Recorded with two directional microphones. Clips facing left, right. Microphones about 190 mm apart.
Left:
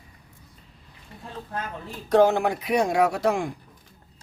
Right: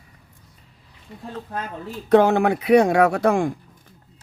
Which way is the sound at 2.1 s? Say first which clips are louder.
Right 3 dB; 60° right (ahead or behind).